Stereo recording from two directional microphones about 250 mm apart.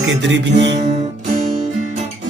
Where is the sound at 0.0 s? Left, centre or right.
Right.